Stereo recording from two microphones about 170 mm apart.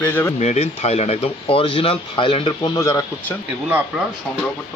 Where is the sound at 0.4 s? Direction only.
40° left (ahead or behind); by 3.0 s 25° left (ahead or behind).